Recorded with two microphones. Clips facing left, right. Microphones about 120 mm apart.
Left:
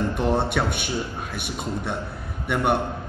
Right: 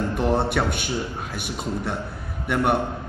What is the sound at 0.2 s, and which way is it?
Speech, 5° right (ahead or behind).